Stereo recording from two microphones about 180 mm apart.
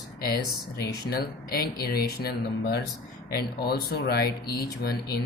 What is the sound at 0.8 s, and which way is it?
Speech, 60° left (ahead or behind).